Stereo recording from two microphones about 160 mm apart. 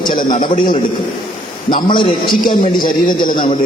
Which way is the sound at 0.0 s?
30° left (ahead or behind).